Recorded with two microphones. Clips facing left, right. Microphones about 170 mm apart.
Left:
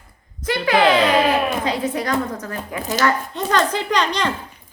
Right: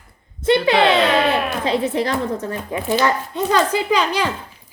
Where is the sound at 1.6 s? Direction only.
25° right (ahead or behind).